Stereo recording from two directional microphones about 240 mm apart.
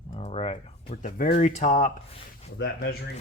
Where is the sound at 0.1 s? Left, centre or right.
Left.